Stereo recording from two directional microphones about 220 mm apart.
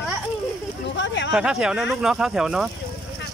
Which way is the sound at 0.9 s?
55° left (ahead or behind).